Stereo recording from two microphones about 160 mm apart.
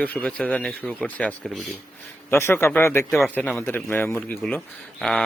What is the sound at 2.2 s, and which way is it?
Speech, 15° left (ahead or behind).